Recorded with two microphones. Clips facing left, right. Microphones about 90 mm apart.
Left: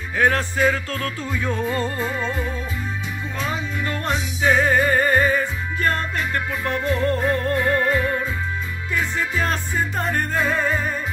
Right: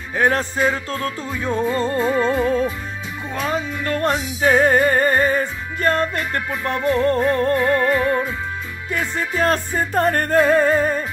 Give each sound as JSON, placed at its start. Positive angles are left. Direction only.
{"t": 0.2, "sound": "music", "side_deg": -30}
{"t": 2.0, "sound": "music", "side_deg": -50}